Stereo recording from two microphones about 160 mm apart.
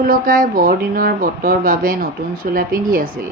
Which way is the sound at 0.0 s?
65° right (ahead or behind).